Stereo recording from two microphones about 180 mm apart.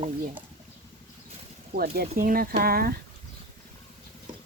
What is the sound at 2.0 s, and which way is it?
Speech, 55° right (ahead or behind).